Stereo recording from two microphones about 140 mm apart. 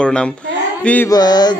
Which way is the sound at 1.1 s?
30° left (ahead or behind).